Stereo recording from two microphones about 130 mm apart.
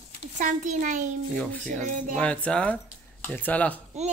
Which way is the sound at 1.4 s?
10° left (ahead or behind).